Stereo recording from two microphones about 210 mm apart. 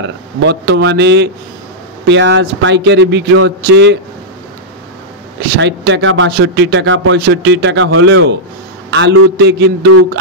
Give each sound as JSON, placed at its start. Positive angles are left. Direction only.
{"t": 0.0, "sound": "speech", "side_deg": -55}
{"t": 5.6, "sound": "speech", "side_deg": -55}
{"t": 6.3, "sound": "speech", "side_deg": -55}